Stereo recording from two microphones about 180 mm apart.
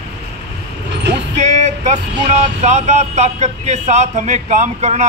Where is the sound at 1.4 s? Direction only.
40° right (ahead or behind).